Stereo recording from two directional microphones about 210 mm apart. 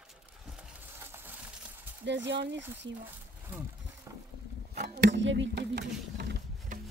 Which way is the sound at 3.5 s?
5° right (ahead or behind).